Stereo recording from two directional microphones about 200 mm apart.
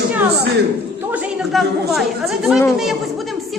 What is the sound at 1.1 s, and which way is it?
Speech, 5° right (ahead or behind).